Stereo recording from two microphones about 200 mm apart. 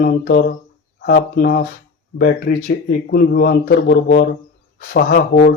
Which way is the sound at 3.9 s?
45° left (ahead or behind).